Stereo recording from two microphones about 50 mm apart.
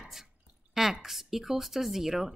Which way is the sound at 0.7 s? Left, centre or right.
Centre.